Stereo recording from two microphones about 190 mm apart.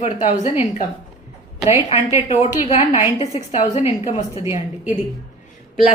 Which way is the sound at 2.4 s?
35° left (ahead or behind).